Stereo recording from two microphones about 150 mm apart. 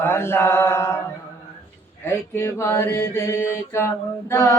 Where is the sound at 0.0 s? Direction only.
15° left (ahead or behind).